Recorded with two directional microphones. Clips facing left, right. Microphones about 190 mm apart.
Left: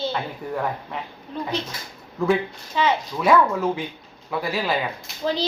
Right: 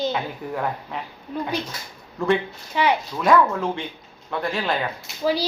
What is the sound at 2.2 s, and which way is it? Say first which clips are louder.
Speech: even; centre (ahead or behind).